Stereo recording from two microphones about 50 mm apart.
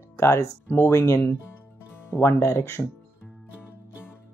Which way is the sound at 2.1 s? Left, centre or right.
Left.